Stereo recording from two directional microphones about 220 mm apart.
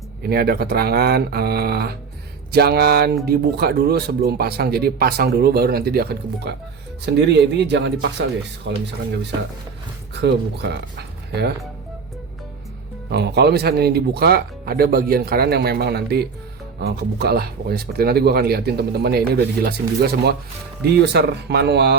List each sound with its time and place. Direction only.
0.2 s speech: 45° right (ahead or behind)
10.2 s speech: 50° right (ahead or behind)
13.1 s speech: 50° right (ahead or behind)